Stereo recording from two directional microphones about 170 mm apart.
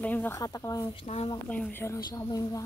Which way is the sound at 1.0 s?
35° left (ahead or behind).